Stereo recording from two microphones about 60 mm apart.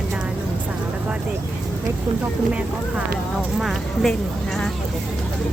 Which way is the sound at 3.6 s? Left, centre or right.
Centre.